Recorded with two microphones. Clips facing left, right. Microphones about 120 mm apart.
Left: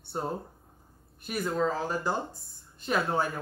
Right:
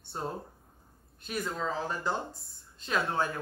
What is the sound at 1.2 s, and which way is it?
Speech, 10° left (ahead or behind).